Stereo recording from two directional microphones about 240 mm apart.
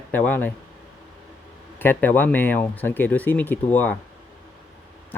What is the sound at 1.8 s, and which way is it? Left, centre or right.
Speech, centre.